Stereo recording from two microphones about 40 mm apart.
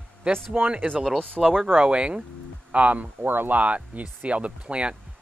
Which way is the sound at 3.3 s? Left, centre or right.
Right.